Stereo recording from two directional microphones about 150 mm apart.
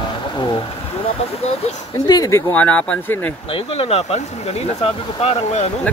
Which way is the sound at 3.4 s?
40° left (ahead or behind).